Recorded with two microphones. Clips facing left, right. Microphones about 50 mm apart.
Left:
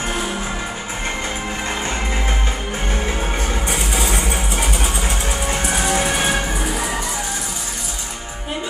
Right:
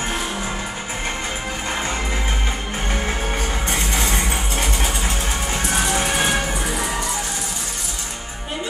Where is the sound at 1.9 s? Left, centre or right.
Left.